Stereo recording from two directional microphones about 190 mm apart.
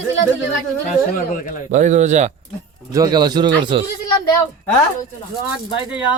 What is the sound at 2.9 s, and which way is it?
Speech, 20° right (ahead or behind).